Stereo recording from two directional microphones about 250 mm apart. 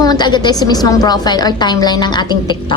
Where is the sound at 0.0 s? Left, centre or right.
Centre.